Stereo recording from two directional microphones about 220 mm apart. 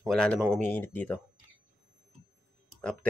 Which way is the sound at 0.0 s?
5° left (ahead or behind).